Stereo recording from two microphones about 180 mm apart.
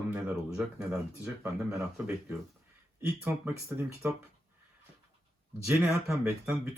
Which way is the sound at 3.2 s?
10° right (ahead or behind).